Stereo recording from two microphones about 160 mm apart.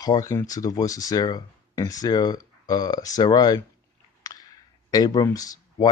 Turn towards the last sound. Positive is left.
turn(degrees=20)  # may be behind; listen again after turning